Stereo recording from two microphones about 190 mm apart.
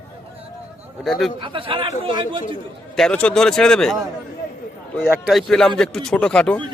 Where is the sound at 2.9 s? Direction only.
5° left (ahead or behind).